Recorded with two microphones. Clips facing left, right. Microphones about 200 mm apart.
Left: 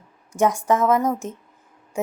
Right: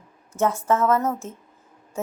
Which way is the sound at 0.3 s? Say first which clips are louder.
Left 2 dB; 15° left (ahead or behind).